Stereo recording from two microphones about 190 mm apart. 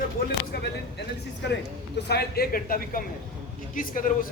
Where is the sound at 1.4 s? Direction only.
65° left (ahead or behind); by 4.1 s 45° left (ahead or behind).